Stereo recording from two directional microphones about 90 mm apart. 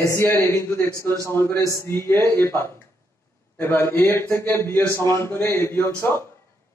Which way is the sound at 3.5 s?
25° left (ahead or behind).